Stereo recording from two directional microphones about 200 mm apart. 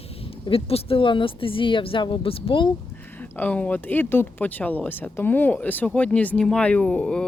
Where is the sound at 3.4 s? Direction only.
5° left (ahead or behind).